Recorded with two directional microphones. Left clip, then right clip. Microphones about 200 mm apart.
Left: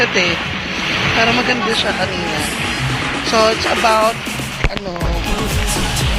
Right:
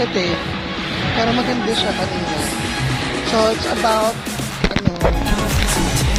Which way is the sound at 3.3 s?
20° left (ahead or behind).